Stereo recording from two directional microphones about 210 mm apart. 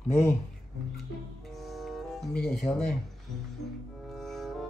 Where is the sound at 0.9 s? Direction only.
Centre (ahead or behind).